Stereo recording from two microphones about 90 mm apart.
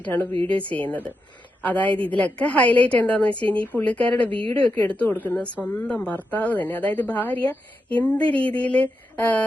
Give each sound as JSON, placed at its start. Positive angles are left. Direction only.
{"t": 0.1, "sound": "a woman's voice", "side_deg": 25}